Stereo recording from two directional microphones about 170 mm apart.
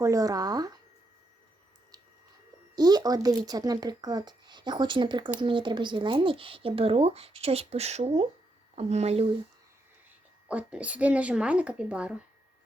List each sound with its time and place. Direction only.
0.0 s speech: 20° right (ahead or behind)
2.7 s speech: 25° right (ahead or behind)
10.5 s speech: 10° right (ahead or behind)